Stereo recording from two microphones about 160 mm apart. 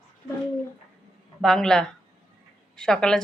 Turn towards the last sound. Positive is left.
turn(degrees=5)  # may be behind; listen again after turning